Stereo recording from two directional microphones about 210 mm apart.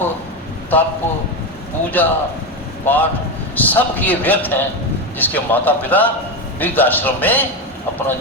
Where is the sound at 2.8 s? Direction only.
10° left (ahead or behind).